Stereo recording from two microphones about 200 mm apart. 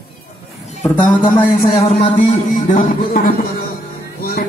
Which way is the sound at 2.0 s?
40° left (ahead or behind).